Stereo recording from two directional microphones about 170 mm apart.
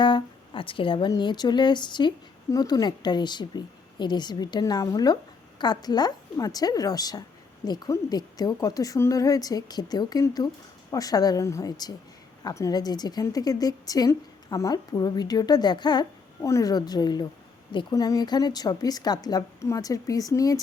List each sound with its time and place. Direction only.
0.0 s speech: 30° left (ahead or behind)